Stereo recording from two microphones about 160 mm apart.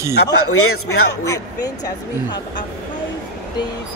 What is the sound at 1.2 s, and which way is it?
Speech, 20° left (ahead or behind).